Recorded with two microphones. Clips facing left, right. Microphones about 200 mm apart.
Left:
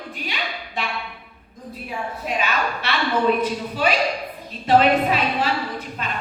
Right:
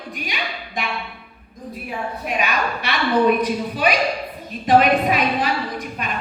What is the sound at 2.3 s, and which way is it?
A woman's voice, 15° right (ahead or behind).